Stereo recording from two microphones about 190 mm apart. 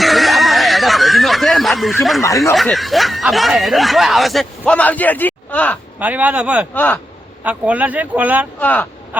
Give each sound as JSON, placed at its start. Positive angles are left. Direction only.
{"t": 0.0, "sound": "snicker", "side_deg": 0}
{"t": 2.2, "sound": "speech", "side_deg": 15}
{"t": 2.6, "sound": "speech", "side_deg": 0}
{"t": 6.0, "sound": "speech", "side_deg": -10}
{"t": 6.7, "sound": "speech", "side_deg": 10}
{"t": 7.4, "sound": "speech", "side_deg": -10}
{"t": 8.5, "sound": "speech", "side_deg": 10}